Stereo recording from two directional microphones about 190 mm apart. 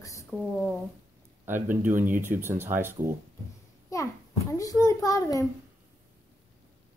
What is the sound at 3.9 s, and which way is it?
A child's voice, 15° left (ahead or behind).